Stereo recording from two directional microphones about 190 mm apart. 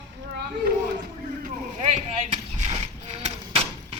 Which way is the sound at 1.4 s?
35° right (ahead or behind).